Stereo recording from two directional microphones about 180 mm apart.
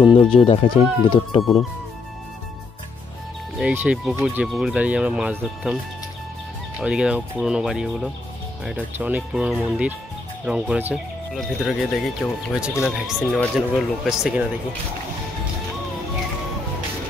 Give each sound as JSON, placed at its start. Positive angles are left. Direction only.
{"t": 0.0, "sound": "speech", "side_deg": 30}
{"t": 3.5, "sound": "speech", "side_deg": -5}
{"t": 6.8, "sound": "speech", "side_deg": -5}